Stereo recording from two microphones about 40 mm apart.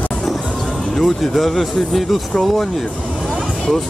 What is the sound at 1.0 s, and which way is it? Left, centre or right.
Speech, centre.